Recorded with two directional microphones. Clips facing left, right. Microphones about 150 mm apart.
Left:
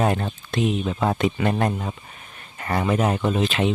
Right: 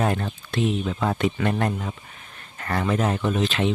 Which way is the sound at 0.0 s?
25° left (ahead or behind).